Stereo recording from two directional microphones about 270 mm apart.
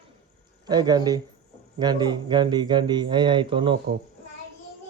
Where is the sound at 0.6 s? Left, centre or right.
Centre.